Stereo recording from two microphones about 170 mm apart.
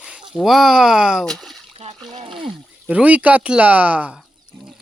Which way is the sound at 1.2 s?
Centre (ahead or behind).